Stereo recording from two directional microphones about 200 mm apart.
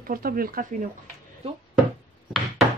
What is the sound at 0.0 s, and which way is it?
Speech, 45° right (ahead or behind).